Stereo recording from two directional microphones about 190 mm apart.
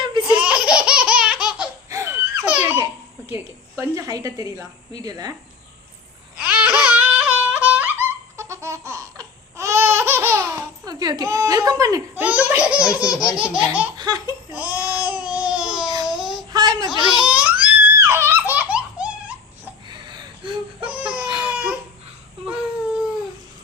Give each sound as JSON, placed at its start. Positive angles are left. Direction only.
{"t": 0.0, "sound": "laughter", "side_deg": -25}
{"t": 0.3, "sound": "laughter", "side_deg": -5}
{"t": 1.9, "sound": "baby laughter", "side_deg": -15}
{"t": 3.3, "sound": "a woman's voice", "side_deg": -15}
{"t": 6.3, "sound": "a sound", "side_deg": -5}
{"t": 14.5, "sound": "babbling", "side_deg": -10}
{"t": 16.0, "sound": "child singing", "side_deg": 0}
{"t": 16.5, "sound": "child singing", "side_deg": -20}
{"t": 17.2, "sound": "baby laughter", "side_deg": -5}
{"t": 19.9, "sound": "whimper", "side_deg": -25}
{"t": 20.9, "sound": "baby cry", "side_deg": -5}
{"t": 21.4, "sound": "a sound", "side_deg": -5}